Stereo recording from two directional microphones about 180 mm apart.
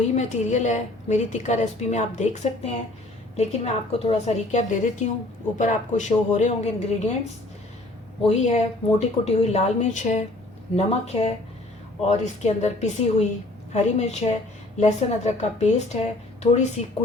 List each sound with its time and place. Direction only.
0.2 s a woman's voice: 40° left (ahead or behind)
8.3 s a woman's voice: 40° left (ahead or behind)